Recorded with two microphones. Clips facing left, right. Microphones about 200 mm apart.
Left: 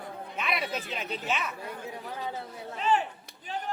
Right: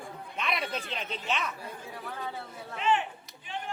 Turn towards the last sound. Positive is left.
turn(degrees=40)  # may be behind; listen again after turning